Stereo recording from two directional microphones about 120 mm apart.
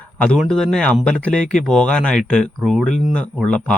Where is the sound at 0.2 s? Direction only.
5° left (ahead or behind).